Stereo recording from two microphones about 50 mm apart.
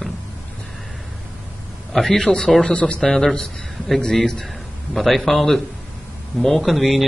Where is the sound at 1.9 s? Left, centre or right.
Centre.